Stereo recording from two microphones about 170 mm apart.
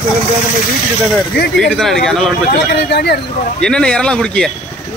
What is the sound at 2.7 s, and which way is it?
Speech, 80° left.